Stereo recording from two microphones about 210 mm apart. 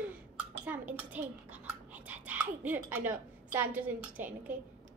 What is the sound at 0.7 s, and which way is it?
A child's voice, 10° right (ahead or behind).